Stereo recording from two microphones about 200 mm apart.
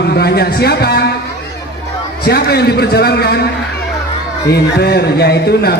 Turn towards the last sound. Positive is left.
turn(degrees=55)  # may be behind; listen again after turning